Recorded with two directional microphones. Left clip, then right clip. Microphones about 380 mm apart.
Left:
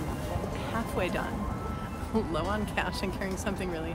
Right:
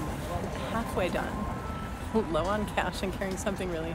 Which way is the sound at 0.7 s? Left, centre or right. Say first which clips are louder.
Right 1 dB; centre.